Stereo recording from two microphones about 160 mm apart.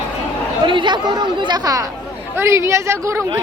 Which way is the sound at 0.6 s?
30° right (ahead or behind).